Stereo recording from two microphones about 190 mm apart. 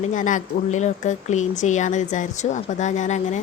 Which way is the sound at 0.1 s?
40° left (ahead or behind).